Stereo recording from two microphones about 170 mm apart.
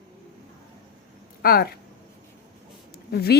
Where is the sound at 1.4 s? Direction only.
60° left (ahead or behind).